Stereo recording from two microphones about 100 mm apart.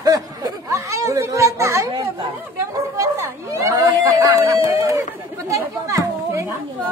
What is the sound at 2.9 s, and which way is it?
Speech, 35° right (ahead or behind).